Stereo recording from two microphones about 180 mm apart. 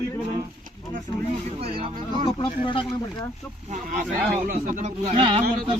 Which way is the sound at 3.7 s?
45° right (ahead or behind).